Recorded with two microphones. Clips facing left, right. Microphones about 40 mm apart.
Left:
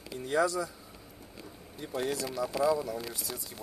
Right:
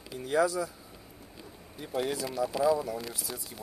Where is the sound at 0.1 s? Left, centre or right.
Centre.